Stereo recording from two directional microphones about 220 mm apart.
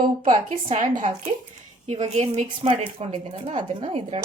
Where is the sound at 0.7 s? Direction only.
35° right (ahead or behind).